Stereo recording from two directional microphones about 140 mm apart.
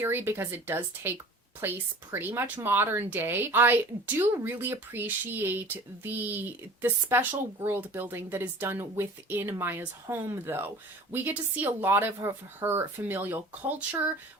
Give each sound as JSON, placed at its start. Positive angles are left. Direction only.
{"t": 0.0, "sound": "speech", "side_deg": -15}